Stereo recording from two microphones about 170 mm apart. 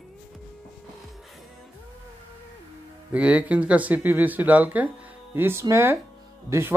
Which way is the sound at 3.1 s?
10° right (ahead or behind).